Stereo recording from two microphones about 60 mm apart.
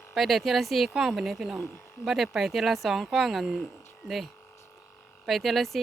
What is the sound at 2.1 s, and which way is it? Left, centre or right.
Speech, centre.